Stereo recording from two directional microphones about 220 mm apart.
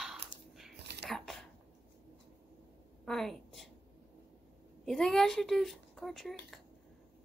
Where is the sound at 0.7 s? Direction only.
50° right (ahead or behind).